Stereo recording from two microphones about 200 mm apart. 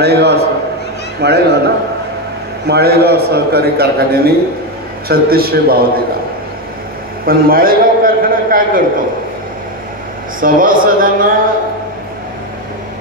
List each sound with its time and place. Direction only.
0.0 s a man's voice: 55° right (ahead or behind)
2.7 s a man's voice: 50° right (ahead or behind)
7.2 s a sound: 45° right (ahead or behind)
10.4 s a man's voice: 45° right (ahead or behind)